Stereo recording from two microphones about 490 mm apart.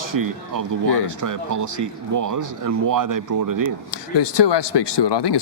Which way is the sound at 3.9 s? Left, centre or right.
Left.